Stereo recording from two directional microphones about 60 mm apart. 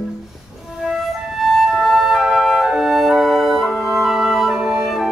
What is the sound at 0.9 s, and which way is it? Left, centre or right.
Flute, centre.